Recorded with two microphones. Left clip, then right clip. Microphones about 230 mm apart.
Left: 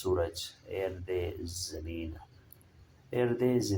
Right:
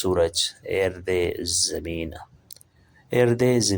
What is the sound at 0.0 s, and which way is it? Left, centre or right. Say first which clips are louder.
Speech: right 10 dB; right.